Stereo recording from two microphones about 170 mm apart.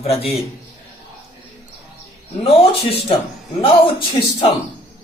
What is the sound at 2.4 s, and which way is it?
Speech, 35° left (ahead or behind).